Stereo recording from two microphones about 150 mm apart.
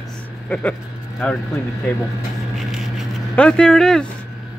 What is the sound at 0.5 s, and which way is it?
Speech, 10° left (ahead or behind).